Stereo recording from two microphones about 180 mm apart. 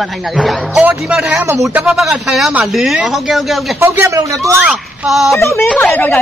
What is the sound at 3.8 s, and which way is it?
Speech, 15° right (ahead or behind).